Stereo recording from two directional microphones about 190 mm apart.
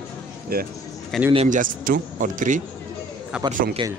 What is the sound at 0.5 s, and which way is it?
Speech, 50° right (ahead or behind).